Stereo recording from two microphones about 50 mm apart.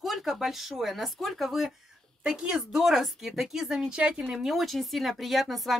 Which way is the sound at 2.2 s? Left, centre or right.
Centre.